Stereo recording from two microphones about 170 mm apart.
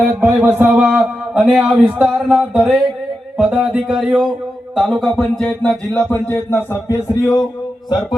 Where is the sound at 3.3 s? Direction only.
5° right (ahead or behind); by 7.4 s 20° left (ahead or behind).